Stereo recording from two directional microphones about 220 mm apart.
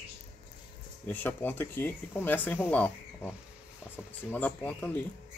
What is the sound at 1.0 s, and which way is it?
Speech, 10° left (ahead or behind).